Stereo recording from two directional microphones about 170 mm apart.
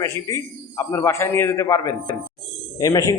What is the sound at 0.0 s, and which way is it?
A man's voice, 15° left (ahead or behind).